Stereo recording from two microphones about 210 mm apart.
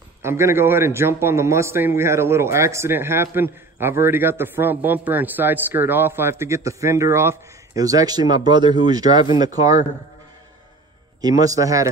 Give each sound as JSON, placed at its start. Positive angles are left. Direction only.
{"t": 0.2, "sound": "a man's voice", "side_deg": -10}
{"t": 11.1, "sound": "a man's voice", "side_deg": -20}